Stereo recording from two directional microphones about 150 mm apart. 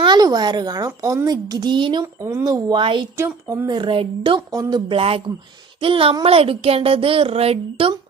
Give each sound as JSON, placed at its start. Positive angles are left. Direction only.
{"t": 0.0, "sound": "a woman's voice", "side_deg": -25}
{"t": 2.2, "sound": "a woman's voice", "side_deg": -20}
{"t": 3.2, "sound": "a woman's voice", "side_deg": -15}
{"t": 3.7, "sound": "a woman's voice", "side_deg": -35}